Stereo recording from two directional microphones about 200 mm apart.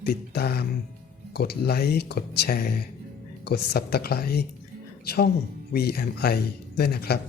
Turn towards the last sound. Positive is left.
turn(degrees=50)  # may be behind; listen again after turning